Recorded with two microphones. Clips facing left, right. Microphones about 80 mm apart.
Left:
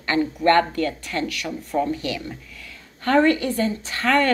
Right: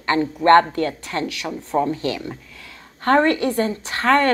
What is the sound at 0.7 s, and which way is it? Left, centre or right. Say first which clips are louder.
Speech: right 2 dB; right.